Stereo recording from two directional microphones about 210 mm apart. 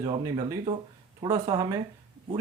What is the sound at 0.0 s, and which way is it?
Speech, 20° right (ahead or behind).